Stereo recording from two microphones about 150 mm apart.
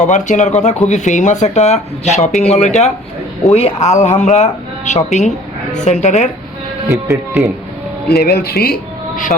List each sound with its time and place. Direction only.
0.0 s speech: 55° left (ahead or behind)
6.8 s speech: 20° right (ahead or behind)
8.0 s speech: 90° left